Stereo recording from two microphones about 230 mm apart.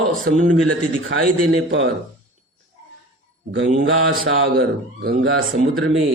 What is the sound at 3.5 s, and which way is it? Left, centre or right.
A man's voice, right.